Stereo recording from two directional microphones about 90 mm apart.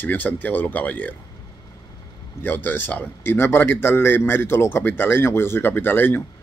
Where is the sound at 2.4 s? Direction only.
20° left (ahead or behind).